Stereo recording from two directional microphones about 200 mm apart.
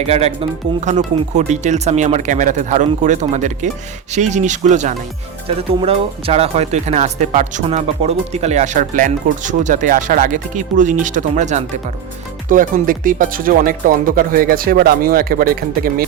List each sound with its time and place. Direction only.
0.0 s speech: 30° right (ahead or behind); by 16.0 s 45° right (ahead or behind)